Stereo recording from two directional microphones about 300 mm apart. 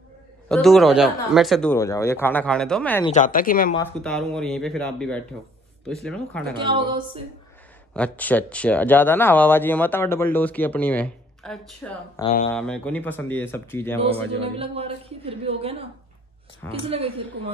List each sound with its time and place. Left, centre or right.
0.5 s speech: centre
3.1 s a woman's voice: left
3.7 s speech: centre
6.5 s speech: centre
7.9 s speech: centre
14.4 s a woman's voice: centre
16.6 s speech: centre